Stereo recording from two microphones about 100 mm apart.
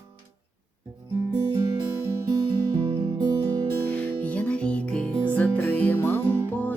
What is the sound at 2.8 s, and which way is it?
Music, 55° right (ahead or behind).